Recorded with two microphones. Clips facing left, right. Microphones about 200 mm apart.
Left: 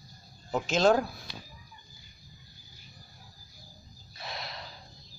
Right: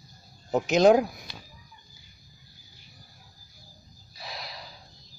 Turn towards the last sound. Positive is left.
turn(degrees=0)  # may be behind; listen again after turning